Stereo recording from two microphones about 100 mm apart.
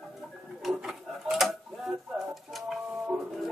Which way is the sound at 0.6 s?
5° right (ahead or behind).